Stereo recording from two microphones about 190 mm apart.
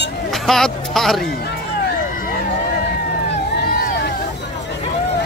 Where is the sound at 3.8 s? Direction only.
55° left (ahead or behind).